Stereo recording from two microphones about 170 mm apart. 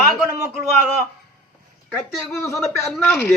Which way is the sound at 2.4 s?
15° left (ahead or behind).